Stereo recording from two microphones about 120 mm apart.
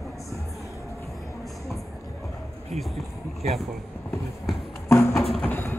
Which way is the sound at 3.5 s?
Centre (ahead or behind).